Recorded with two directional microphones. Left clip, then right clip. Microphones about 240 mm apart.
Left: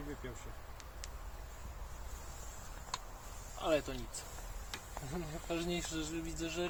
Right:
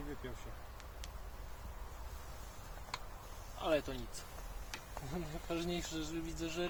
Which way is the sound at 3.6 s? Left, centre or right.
Centre.